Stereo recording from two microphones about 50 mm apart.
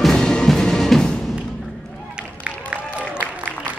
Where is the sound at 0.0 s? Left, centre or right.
Centre.